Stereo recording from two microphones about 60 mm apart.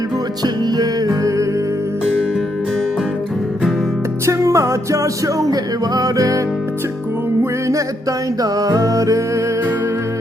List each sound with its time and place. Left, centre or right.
0.8 s music: right
4.3 s music: right
8.4 s music: right